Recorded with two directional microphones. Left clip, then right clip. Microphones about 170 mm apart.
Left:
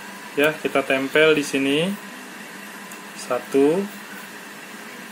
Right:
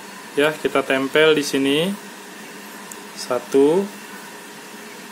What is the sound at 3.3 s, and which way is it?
Speech, 15° right (ahead or behind).